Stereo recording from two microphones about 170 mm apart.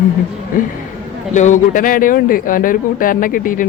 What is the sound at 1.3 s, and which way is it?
Speech, 45° left (ahead or behind).